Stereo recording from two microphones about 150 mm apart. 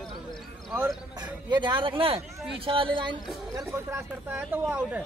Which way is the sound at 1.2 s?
30° right (ahead or behind).